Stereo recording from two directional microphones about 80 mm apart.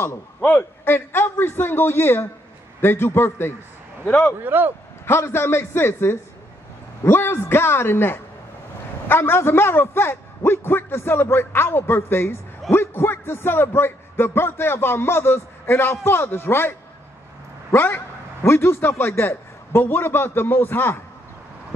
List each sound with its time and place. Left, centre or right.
0.4 s a man's voice: left
4.4 s speech: right
5.0 s a man's voice: left
17.7 s a man's voice: left